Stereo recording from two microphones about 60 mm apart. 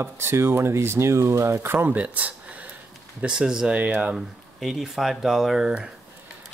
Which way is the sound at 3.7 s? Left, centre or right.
Right.